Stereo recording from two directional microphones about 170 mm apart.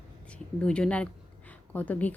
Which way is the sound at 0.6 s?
5° left (ahead or behind).